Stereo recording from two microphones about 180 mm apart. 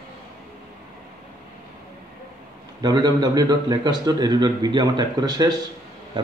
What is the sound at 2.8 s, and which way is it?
Speech, 20° right (ahead or behind).